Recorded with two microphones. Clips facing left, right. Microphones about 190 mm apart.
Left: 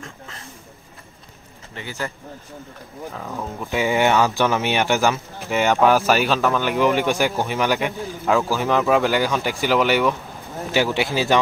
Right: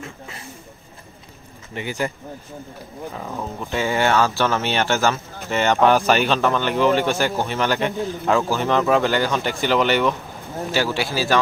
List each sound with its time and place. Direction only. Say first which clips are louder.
0.0 s a sound: right 3 dB; 10° right (ahead or behind)
1.8 s speech: right 5 dB; 15° right (ahead or behind)
3.2 s speech: even; 5° right (ahead or behind)
3.7 s speech: left 1 dB; 15° left (ahead or behind)
10.7 s speech: left 2 dB; 15° left (ahead or behind)